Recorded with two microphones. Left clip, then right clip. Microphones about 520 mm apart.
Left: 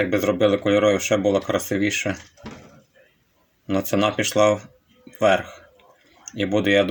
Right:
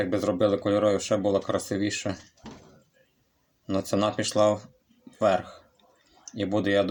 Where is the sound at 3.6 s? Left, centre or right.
Right.